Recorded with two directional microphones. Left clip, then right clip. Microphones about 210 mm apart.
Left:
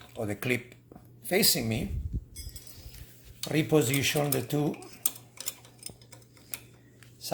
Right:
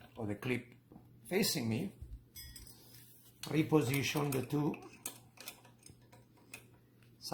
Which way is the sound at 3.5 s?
30° left (ahead or behind).